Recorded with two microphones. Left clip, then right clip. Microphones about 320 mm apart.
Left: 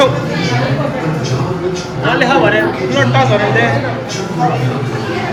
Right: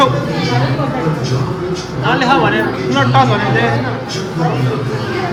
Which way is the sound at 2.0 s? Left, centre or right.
Centre.